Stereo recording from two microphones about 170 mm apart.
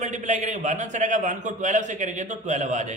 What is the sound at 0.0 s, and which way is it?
A man's voice, 45° right (ahead or behind).